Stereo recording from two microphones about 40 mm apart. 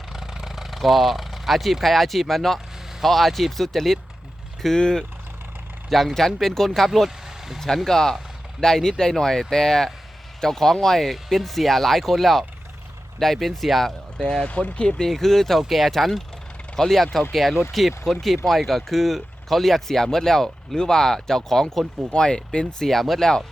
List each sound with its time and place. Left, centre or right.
0.1 s speech: centre
4.8 s speech: centre
5.9 s speech: centre
7.3 s vehicle: centre
7.9 s speech: centre
14.2 s speech: centre
14.4 s speech: left
15.0 s speech: centre
15.6 s speech: centre
16.7 s speech: centre
17.3 s speech: centre
22.1 s speech: left
22.9 s speech: centre
23.2 s speech: centre